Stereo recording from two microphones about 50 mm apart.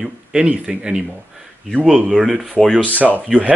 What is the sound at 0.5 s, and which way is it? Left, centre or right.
Speech, right.